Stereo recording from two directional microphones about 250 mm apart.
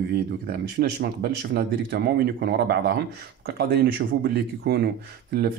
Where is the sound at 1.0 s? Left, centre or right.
Right.